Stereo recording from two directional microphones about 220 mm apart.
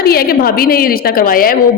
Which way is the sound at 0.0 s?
45° left (ahead or behind).